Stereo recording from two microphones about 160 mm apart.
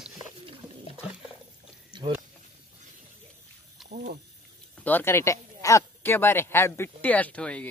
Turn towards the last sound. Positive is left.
turn(degrees=5)  # may be behind; listen again after turning